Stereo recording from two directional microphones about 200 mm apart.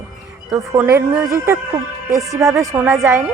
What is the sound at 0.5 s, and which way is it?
A woman's voice, 15° right (ahead or behind).